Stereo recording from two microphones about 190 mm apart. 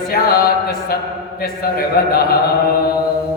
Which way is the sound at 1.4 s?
55° left (ahead or behind).